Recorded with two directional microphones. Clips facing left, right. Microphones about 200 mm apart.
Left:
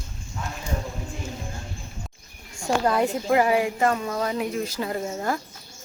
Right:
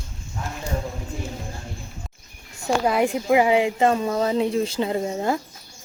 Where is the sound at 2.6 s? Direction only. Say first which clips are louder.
Right 2 dB; 10° right (ahead or behind).